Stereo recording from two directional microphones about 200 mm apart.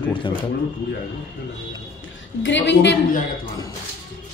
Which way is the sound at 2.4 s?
60° left (ahead or behind).